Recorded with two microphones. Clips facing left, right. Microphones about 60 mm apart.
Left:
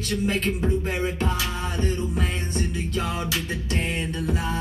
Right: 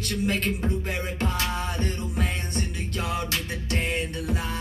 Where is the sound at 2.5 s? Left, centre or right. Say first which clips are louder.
Left 3 dB; centre.